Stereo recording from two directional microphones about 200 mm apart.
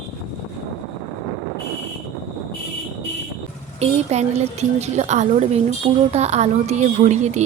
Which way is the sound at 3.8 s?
35° right (ahead or behind).